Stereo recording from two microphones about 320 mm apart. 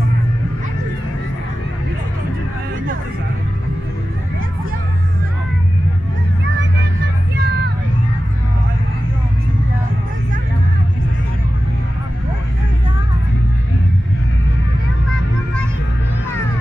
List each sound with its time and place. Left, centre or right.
7.3 s vehicle: right